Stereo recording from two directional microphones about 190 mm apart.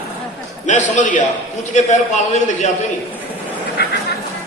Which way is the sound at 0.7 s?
40° left (ahead or behind).